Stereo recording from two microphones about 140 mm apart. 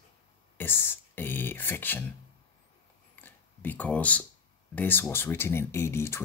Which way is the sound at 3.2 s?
10° left (ahead or behind).